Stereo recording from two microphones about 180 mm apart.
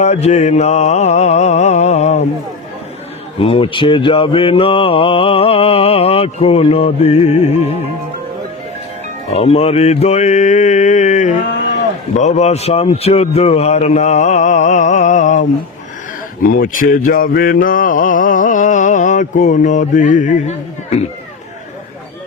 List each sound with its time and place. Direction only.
0.0 s mantra: 40° left (ahead or behind)
3.4 s mantra: 30° left (ahead or behind)
9.3 s mantra: 35° left (ahead or behind)
16.4 s a sound: 50° left (ahead or behind)